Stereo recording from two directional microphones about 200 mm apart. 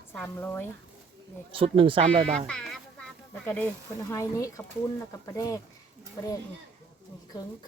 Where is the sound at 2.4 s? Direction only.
5° left (ahead or behind).